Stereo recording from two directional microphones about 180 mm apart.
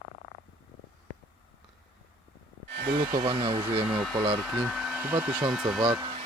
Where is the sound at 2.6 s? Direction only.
65° right (ahead or behind).